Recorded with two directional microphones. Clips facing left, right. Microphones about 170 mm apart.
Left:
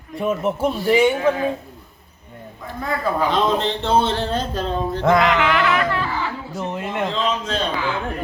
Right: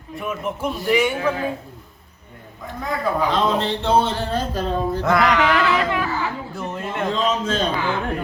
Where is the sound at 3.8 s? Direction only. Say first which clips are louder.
Even; 10° right (ahead or behind).